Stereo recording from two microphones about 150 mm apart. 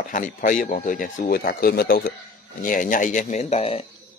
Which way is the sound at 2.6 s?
60° left (ahead or behind).